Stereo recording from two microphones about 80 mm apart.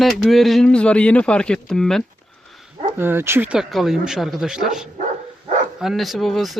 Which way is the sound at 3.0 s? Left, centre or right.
Right.